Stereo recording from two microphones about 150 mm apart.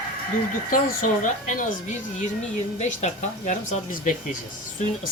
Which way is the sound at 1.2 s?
55° left (ahead or behind).